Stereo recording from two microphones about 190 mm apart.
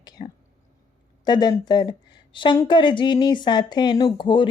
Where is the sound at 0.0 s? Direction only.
20° left (ahead or behind).